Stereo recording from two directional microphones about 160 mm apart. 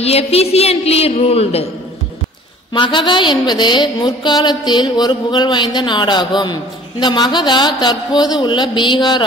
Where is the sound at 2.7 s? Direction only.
30° left (ahead or behind).